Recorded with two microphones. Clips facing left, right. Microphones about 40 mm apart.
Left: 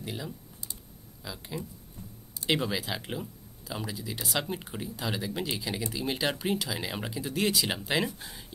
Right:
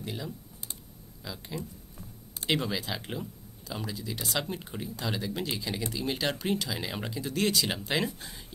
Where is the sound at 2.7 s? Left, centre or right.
Centre.